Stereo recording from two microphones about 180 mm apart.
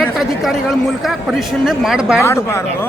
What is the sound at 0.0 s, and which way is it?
A man's voice, centre (ahead or behind).